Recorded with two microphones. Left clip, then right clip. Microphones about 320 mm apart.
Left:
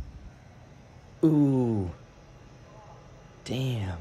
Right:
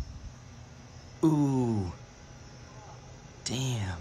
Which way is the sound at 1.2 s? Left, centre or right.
Centre.